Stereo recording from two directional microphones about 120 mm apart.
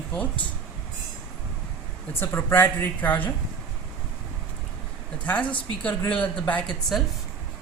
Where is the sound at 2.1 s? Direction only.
20° left (ahead or behind).